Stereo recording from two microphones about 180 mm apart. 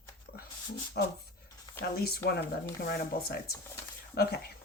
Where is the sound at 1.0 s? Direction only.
65° left (ahead or behind).